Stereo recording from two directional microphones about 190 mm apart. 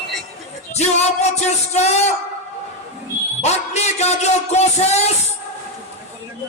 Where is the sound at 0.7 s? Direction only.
35° left (ahead or behind).